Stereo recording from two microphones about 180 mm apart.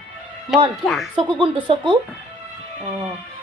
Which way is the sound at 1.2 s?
25° right (ahead or behind).